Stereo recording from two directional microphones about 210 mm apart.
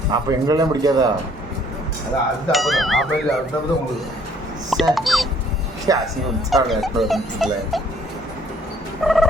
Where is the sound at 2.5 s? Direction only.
Centre (ahead or behind).